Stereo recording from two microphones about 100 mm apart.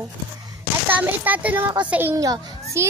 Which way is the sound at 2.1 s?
35° right (ahead or behind).